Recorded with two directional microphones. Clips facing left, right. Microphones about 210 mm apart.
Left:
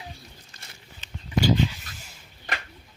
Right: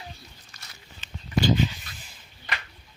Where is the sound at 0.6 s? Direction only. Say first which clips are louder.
Right 1 dB; 30° left (ahead or behind).